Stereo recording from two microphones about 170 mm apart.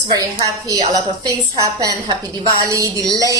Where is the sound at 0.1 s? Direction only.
20° right (ahead or behind).